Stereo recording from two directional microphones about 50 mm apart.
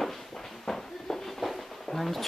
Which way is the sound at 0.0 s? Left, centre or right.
Centre.